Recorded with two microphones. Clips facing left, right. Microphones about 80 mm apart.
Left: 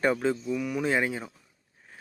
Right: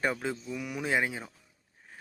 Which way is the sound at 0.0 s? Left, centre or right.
Centre.